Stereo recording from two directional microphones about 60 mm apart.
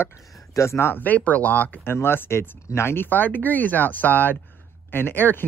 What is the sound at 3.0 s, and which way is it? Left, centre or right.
Speech, left.